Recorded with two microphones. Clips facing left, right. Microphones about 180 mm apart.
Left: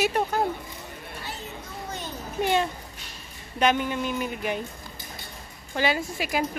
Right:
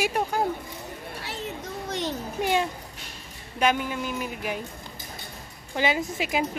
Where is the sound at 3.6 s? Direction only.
5° right (ahead or behind).